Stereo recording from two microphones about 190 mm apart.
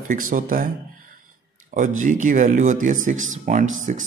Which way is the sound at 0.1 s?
45° right (ahead or behind).